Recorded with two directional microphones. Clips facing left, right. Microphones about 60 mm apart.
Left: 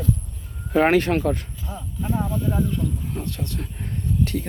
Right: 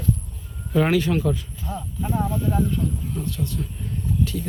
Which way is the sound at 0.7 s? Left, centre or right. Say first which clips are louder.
Left 2 dB; left.